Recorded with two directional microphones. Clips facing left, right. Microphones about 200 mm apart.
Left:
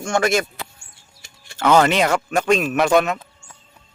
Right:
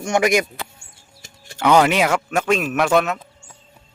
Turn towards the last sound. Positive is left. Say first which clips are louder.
# left 1 dB
turn(degrees=0)  # may be behind; listen again after turning